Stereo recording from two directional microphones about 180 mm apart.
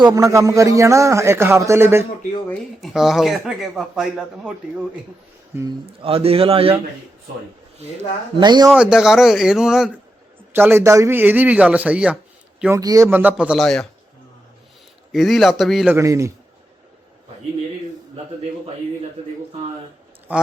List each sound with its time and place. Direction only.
0.0 s a man's voice: 20° right (ahead or behind)
2.5 s speech: centre (ahead or behind)
5.8 s a man's voice: 30° right (ahead or behind)
8.4 s speech: 25° right (ahead or behind)
8.7 s a man's voice: 5° right (ahead or behind)
15.1 s speech: centre (ahead or behind)
16.0 s a man's voice: 15° right (ahead or behind)
20.3 s a man's voice: 10° right (ahead or behind)